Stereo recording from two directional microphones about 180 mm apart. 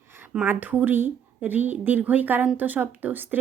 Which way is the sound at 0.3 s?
10° right (ahead or behind).